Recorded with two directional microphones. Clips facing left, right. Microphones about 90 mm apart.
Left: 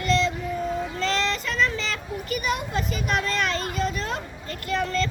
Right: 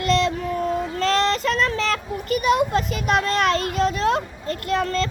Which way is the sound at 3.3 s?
45° right (ahead or behind).